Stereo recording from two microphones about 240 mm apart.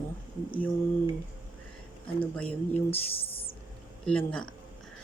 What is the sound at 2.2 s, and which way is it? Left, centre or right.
Speech, centre.